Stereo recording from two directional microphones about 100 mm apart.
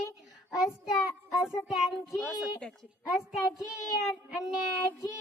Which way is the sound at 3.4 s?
5° right (ahead or behind).